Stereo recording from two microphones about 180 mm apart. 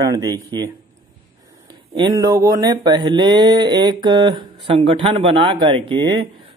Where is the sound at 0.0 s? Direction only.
20° right (ahead or behind).